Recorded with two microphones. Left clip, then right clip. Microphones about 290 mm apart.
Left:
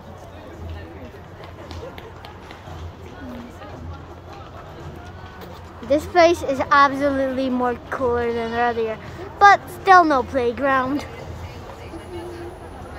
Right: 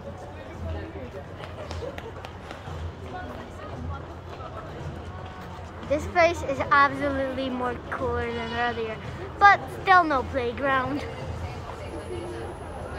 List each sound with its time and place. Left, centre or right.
5.9 s a woman's voice: left